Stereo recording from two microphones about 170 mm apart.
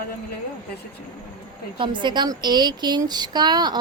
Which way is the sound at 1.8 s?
30° right (ahead or behind).